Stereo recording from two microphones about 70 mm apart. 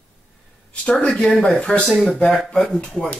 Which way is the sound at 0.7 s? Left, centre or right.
Centre.